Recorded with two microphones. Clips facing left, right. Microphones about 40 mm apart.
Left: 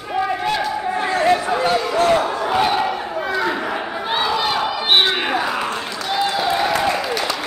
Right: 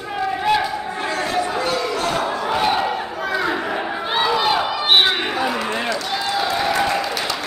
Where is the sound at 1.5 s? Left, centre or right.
Left.